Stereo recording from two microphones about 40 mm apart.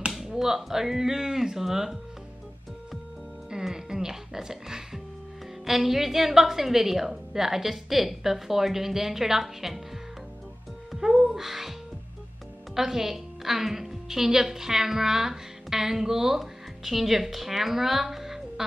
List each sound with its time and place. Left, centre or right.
0.3 s a woman's voice: centre
3.4 s a woman's voice: centre
11.0 s music: centre
12.7 s a woman's voice: centre